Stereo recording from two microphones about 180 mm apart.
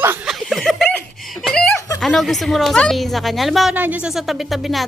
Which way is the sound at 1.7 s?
20° left (ahead or behind).